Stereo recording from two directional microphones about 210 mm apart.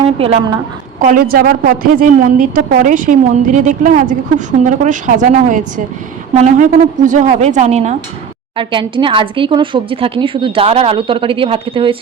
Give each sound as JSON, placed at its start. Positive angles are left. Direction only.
{"t": 1.0, "sound": "a woman's voice", "side_deg": -45}